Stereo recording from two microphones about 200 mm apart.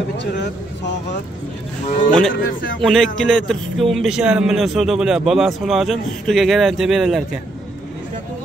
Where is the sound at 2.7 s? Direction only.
Centre (ahead or behind).